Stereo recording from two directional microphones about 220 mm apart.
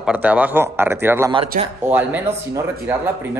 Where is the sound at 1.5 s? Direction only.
35° right (ahead or behind).